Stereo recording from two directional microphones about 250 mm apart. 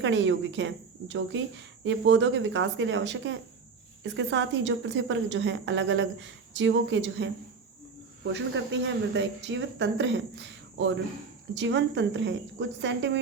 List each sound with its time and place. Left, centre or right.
0.0 s speech: right